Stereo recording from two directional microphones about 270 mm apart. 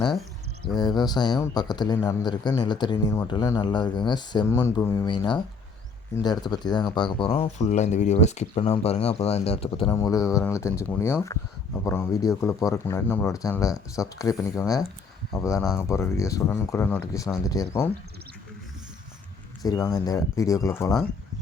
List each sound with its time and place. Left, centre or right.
0.6 s speech: centre
19.6 s speech: centre